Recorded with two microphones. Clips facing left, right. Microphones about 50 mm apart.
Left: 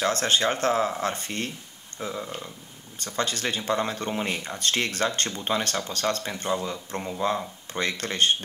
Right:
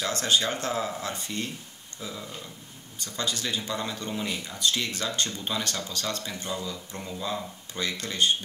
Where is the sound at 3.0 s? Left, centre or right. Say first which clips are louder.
Left 4 dB; left.